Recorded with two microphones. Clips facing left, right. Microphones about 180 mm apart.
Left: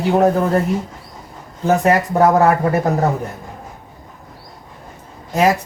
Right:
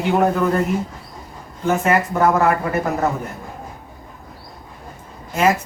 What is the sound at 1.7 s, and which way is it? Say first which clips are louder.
Speech: left 3 dB; 35° left (ahead or behind).